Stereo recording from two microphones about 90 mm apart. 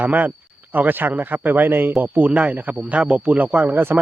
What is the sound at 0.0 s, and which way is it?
Speech, 20° right (ahead or behind).